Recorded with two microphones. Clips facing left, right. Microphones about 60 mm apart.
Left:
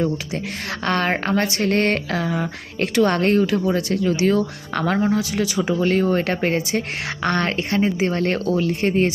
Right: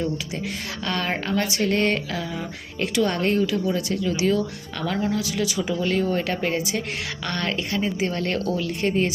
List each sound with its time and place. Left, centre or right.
0.9 s speech: left
5.0 s speech: left